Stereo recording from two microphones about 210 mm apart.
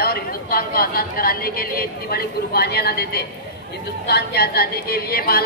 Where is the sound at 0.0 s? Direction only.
45° left (ahead or behind).